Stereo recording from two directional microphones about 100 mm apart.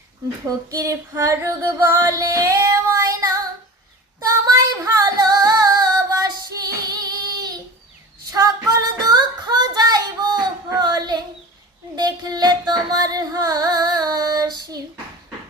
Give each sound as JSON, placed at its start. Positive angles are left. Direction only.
{"t": 0.4, "sound": "female singing", "side_deg": -35}
{"t": 4.2, "sound": "music", "side_deg": -35}
{"t": 8.3, "sound": "child singing", "side_deg": -35}
{"t": 11.9, "sound": "singing", "side_deg": -45}